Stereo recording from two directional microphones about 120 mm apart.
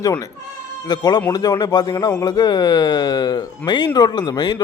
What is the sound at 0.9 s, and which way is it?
Speech, 35° left (ahead or behind).